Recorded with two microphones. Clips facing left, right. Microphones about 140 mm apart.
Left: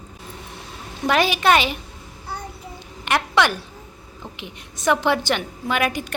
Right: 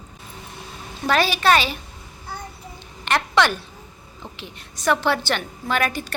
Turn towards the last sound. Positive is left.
turn(degrees=15)  # may be behind; listen again after turning